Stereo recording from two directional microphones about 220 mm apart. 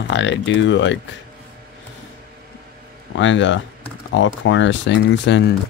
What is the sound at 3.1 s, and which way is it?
Speech, 60° left (ahead or behind).